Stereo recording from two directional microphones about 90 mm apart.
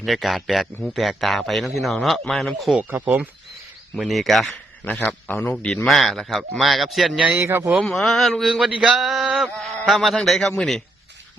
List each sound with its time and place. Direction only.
0.0 s a man's voice: centre (ahead or behind)
2.9 s speech: 20° right (ahead or behind)
3.9 s a man's voice: centre (ahead or behind)
4.5 s a man's voice: 15° left (ahead or behind)
6.0 s a man's voice: centre (ahead or behind)
7.3 s speech: 30° right (ahead or behind)
7.9 s a man's voice: 5° left (ahead or behind)